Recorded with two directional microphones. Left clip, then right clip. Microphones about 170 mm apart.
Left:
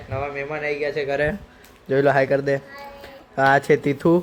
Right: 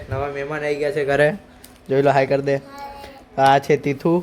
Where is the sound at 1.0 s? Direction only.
55° right (ahead or behind).